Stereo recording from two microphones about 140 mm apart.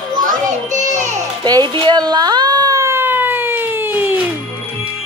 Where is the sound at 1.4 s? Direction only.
30° right (ahead or behind); by 4.1 s 15° right (ahead or behind).